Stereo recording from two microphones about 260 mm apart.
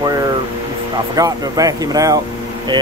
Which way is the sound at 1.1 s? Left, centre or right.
Centre.